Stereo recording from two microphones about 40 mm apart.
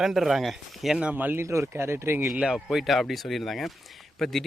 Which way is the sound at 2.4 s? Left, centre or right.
Centre.